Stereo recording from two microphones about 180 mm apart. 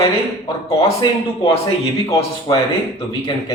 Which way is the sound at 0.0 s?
25° left (ahead or behind).